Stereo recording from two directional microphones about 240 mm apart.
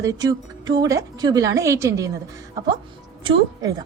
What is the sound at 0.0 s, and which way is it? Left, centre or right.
A woman's voice, centre.